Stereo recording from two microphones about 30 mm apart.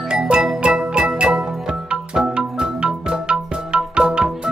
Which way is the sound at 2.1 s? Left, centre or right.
Right.